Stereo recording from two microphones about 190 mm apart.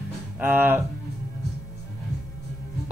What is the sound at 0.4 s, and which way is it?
Speech, 10° right (ahead or behind).